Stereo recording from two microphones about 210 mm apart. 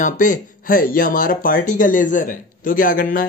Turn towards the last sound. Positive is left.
turn(degrees=40)  # may be behind; listen again after turning